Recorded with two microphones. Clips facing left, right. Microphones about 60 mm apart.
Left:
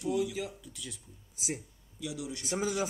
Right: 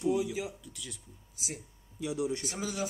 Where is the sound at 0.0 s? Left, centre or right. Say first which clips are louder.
Right 1 dB; centre.